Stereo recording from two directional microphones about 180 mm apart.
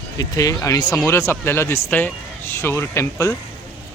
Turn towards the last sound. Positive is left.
turn(degrees=15)  # may be behind; listen again after turning